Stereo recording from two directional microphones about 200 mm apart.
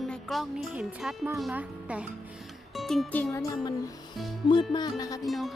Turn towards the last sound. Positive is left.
turn(degrees=0)  # may be behind; listen again after turning